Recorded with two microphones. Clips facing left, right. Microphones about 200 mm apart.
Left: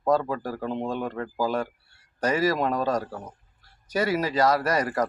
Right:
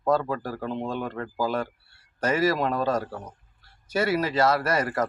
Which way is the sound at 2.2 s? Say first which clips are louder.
Even; 35° left (ahead or behind).